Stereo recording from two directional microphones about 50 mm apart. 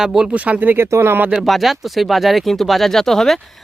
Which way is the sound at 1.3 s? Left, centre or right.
Centre.